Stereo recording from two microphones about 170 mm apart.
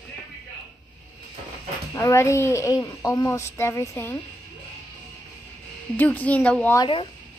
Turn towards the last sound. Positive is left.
turn(degrees=25)  # may be behind; listen again after turning